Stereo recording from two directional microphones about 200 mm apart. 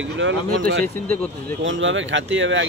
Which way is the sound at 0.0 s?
70° right (ahead or behind).